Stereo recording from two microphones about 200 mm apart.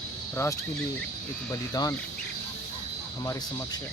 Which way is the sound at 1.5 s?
20° left (ahead or behind).